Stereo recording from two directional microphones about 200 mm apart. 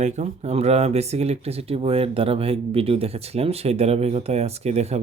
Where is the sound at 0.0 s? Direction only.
35° right (ahead or behind).